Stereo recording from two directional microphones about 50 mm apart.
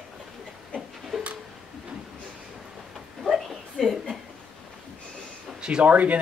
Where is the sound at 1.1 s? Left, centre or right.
Centre.